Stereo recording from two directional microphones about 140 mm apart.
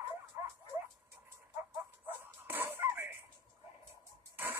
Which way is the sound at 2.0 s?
15° right (ahead or behind).